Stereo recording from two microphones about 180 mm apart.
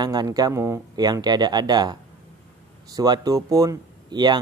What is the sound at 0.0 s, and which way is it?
Speech, 20° right (ahead or behind).